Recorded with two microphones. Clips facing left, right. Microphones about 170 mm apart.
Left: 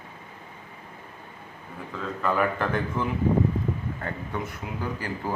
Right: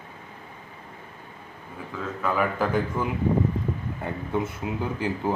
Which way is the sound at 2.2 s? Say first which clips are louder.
Even; centre (ahead or behind).